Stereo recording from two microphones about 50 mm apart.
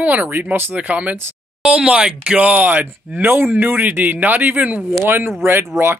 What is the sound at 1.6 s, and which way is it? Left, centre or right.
Speech, centre.